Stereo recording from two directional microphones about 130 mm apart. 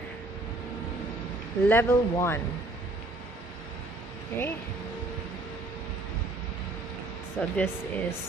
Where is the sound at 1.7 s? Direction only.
20° left (ahead or behind).